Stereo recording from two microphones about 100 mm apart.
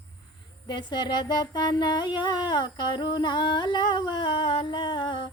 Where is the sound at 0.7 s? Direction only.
50° left (ahead or behind).